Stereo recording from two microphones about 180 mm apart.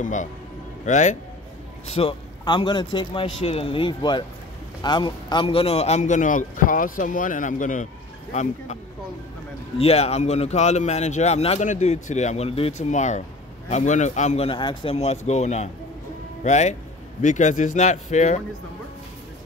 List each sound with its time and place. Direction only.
0.0 s a man's voice: 45° left (ahead or behind)
1.9 s a man's voice: 30° left (ahead or behind)
9.8 s speech: 35° left (ahead or behind)